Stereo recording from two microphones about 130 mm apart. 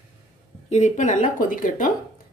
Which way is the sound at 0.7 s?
65° left (ahead or behind).